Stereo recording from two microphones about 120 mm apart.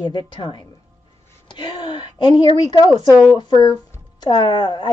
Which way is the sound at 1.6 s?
40° left (ahead or behind).